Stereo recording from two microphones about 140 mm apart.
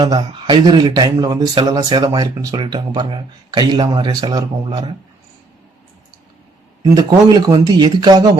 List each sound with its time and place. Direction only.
0.0 s speech: 35° right (ahead or behind)
6.9 s speech: 30° right (ahead or behind)